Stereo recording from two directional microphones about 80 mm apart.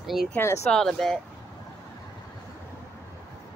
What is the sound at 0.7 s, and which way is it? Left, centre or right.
Speech, centre.